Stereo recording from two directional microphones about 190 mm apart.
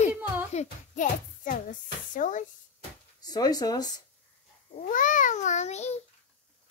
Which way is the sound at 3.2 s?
20° left (ahead or behind).